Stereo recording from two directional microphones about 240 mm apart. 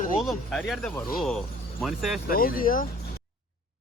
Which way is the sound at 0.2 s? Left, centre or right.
Centre.